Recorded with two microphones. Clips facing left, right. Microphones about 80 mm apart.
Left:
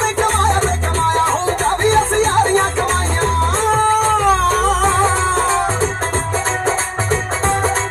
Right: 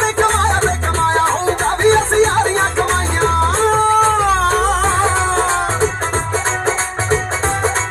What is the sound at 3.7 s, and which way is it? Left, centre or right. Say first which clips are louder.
Music: right 1 dB; right.